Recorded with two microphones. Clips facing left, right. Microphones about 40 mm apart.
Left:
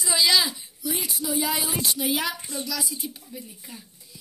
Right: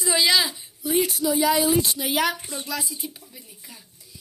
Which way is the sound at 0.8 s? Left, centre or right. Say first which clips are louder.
Right 9 dB; right.